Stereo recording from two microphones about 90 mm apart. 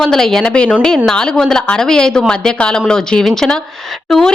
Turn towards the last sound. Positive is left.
turn(degrees=5)  # may be behind; listen again after turning